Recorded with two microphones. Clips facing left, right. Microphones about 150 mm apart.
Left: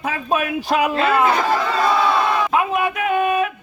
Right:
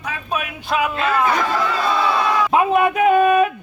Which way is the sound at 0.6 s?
35° left (ahead or behind).